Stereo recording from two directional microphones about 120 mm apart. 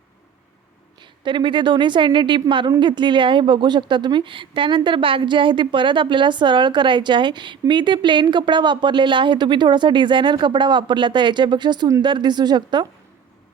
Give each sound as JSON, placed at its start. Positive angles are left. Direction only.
{"t": 1.2, "sound": "a woman's voice", "side_deg": -40}